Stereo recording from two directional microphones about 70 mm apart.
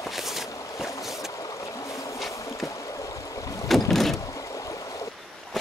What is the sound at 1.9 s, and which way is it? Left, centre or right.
Boat, left.